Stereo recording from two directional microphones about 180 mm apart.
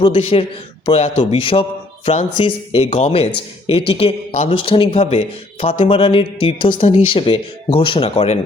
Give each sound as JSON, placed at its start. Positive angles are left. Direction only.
{"t": 0.0, "sound": "a man's voice", "side_deg": 30}